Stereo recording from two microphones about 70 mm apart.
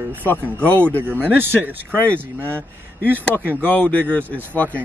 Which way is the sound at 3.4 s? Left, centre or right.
Centre.